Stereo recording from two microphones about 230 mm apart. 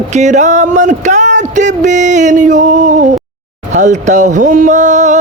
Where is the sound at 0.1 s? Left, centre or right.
Right.